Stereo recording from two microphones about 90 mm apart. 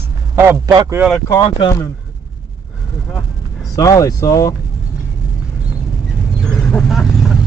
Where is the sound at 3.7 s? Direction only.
40° left (ahead or behind).